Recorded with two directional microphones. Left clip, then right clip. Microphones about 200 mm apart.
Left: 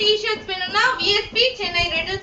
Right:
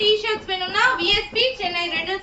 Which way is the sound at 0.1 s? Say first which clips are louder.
Even; 15° left (ahead or behind).